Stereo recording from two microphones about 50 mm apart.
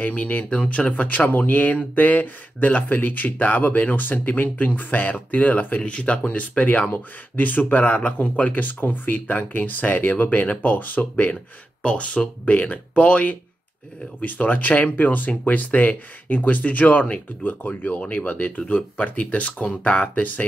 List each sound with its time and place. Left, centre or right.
0.0 s speech: left
18.6 s speech: left